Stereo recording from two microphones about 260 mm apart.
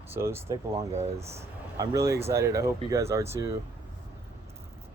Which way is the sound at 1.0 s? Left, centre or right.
Right.